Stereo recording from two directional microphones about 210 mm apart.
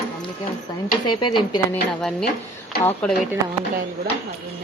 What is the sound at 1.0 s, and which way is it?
Speech, 20° left (ahead or behind).